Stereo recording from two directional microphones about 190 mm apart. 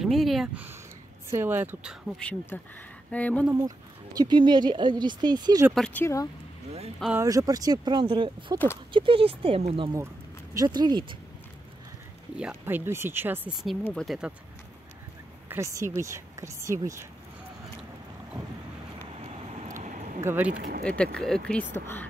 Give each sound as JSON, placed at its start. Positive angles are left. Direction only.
{"t": 0.0, "sound": "speech", "side_deg": 0}
{"t": 1.3, "sound": "speech", "side_deg": -10}
{"t": 3.5, "sound": "speech", "side_deg": -20}
{"t": 5.8, "sound": "speech", "side_deg": 10}
{"t": 7.2, "sound": "speech", "side_deg": -15}
{"t": 12.4, "sound": "speech", "side_deg": -10}
{"t": 13.8, "sound": "speech", "side_deg": 0}
{"t": 15.4, "sound": "speech", "side_deg": -15}
{"t": 19.8, "sound": "a sound", "side_deg": -40}
{"t": 20.2, "sound": "speech", "side_deg": -10}
{"t": 20.5, "sound": "speech", "side_deg": -45}
{"t": 20.8, "sound": "speech", "side_deg": 5}